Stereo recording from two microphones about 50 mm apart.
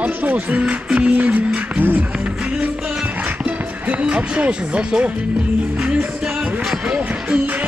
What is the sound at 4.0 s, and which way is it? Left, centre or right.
Speech, right.